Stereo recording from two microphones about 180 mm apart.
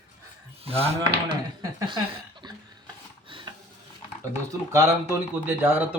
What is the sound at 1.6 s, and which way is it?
Chuckle, 25° right (ahead or behind).